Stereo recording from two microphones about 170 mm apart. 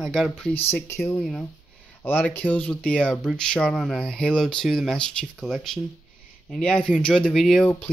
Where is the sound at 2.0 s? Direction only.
10° left (ahead or behind).